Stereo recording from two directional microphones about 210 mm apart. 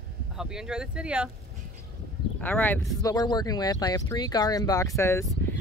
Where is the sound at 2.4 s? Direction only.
10° left (ahead or behind).